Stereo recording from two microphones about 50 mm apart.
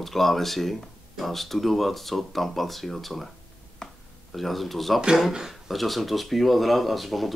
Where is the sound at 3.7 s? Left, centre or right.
Centre.